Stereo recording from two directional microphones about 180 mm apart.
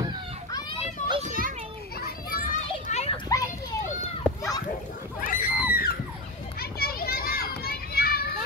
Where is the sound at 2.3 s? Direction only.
50° left (ahead or behind).